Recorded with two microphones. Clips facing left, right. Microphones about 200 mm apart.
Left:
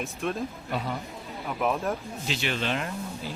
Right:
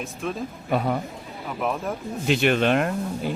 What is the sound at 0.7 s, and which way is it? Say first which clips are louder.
Speech: right 10 dB; 60° right (ahead or behind).